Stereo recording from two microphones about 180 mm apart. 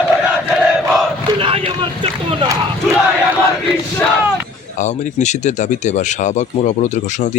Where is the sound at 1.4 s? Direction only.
30° right (ahead or behind).